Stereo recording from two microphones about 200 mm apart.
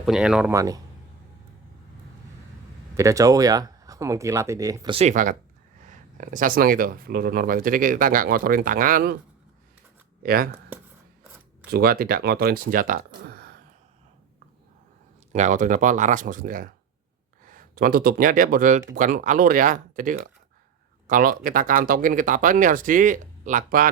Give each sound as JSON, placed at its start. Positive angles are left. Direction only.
{"t": 0.0, "sound": "speech", "side_deg": -5}
{"t": 2.9, "sound": "speech", "side_deg": -15}
{"t": 4.9, "sound": "speech", "side_deg": -35}
{"t": 10.2, "sound": "speech", "side_deg": -45}
{"t": 11.7, "sound": "speech", "side_deg": -50}
{"t": 15.3, "sound": "speech", "side_deg": -40}